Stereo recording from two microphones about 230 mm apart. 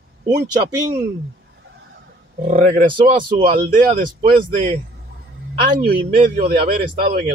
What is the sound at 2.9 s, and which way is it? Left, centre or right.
Speech, right.